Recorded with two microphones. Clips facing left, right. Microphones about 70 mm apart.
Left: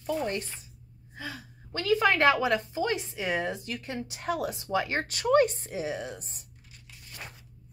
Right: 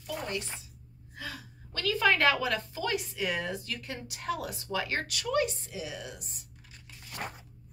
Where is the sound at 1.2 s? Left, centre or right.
Centre.